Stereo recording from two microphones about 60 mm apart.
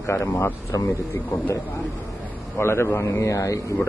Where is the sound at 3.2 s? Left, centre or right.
Left.